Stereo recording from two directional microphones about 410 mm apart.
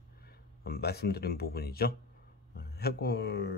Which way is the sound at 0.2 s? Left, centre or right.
Left.